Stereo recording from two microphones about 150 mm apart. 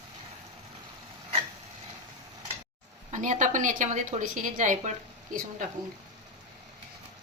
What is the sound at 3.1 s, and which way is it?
A woman's voice, 55° right (ahead or behind).